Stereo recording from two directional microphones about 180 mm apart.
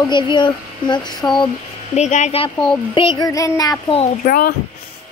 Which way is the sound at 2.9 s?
25° left (ahead or behind).